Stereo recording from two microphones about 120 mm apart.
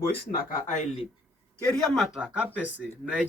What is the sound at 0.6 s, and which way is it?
Speech, 90° left.